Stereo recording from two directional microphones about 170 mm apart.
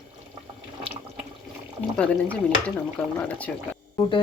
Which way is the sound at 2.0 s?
5° left (ahead or behind).